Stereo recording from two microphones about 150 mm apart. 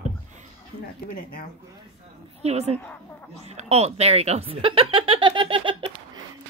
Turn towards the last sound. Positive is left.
turn(degrees=-35)  # may be behind; listen again after turning